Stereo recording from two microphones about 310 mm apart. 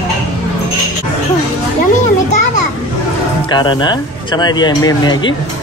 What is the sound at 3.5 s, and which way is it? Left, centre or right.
Speech, centre.